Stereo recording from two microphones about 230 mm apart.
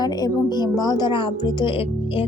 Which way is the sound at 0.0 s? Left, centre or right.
Centre.